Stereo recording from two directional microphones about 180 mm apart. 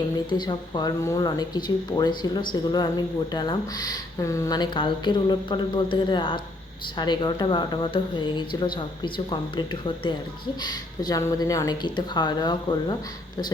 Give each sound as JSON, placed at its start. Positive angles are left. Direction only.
{"t": 0.3, "sound": "speech", "side_deg": 25}